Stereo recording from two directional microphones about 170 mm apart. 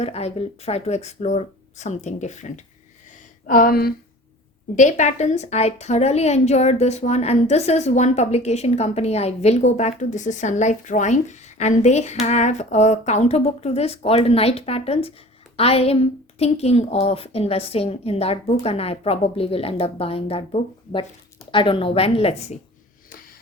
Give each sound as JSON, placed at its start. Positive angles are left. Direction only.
{"t": 0.0, "sound": "a woman's voice", "side_deg": 40}
{"t": 3.4, "sound": "speech", "side_deg": 55}
{"t": 4.7, "sound": "a woman's voice", "side_deg": 45}